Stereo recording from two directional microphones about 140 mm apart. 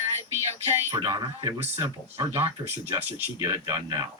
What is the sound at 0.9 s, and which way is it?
Speech, 30° right (ahead or behind).